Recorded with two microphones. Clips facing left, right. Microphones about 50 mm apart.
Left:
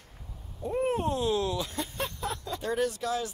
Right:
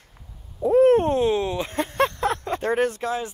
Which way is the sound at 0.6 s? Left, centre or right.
Right.